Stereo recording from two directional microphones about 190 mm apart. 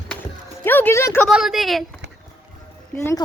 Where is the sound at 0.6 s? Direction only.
10° left (ahead or behind).